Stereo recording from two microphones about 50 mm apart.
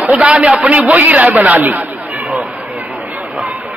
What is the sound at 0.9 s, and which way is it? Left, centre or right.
A man's voice, right.